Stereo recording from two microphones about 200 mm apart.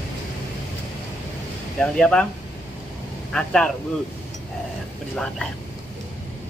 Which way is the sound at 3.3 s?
5° left (ahead or behind).